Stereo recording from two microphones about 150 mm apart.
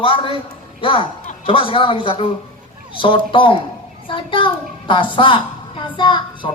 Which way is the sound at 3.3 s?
35° left (ahead or behind).